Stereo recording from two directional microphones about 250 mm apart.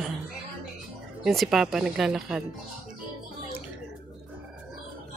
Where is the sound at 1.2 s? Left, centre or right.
Centre.